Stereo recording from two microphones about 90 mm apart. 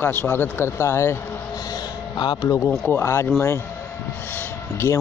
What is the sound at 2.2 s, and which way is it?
Speech, 55° left (ahead or behind).